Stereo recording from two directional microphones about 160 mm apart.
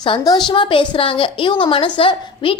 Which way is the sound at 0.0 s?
25° left (ahead or behind).